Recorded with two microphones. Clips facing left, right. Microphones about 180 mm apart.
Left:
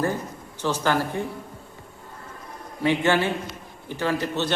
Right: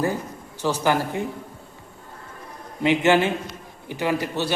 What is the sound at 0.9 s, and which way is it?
Speech, 15° right (ahead or behind).